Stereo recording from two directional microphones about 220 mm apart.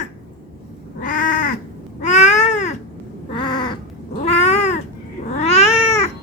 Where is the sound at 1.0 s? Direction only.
35° left (ahead or behind).